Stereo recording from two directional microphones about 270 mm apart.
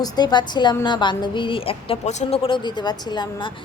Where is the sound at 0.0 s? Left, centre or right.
Centre.